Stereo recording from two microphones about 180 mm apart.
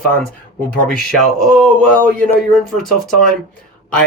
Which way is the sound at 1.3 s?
5° left (ahead or behind).